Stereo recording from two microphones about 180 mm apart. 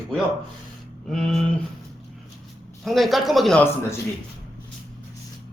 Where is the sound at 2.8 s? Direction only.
Centre (ahead or behind).